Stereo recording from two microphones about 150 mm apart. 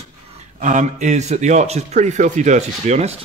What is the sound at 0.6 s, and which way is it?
A man's voice, 55° right (ahead or behind).